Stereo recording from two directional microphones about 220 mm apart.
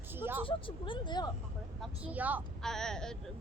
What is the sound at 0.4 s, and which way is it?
Speech, 25° left (ahead or behind).